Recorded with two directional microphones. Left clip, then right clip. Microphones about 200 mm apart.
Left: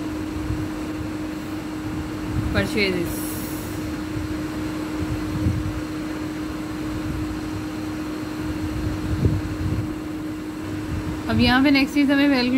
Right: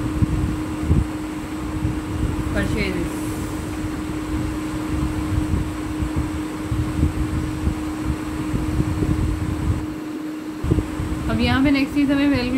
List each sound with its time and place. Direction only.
2.5 s speech: 45° left (ahead or behind)
11.2 s a woman's voice: 25° left (ahead or behind)